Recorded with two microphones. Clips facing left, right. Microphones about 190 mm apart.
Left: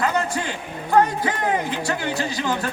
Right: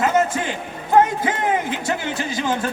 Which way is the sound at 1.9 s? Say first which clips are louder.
Even; 20° right (ahead or behind).